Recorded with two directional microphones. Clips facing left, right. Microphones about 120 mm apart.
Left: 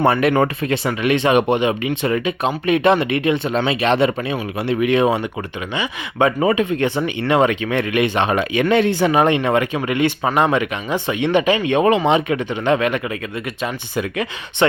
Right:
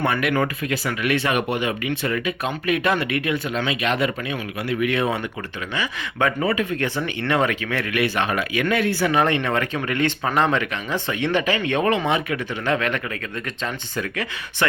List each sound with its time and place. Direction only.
0.0 s speech: 30° left (ahead or behind)